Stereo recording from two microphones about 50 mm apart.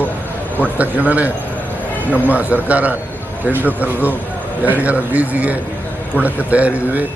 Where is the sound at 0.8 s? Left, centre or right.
Right.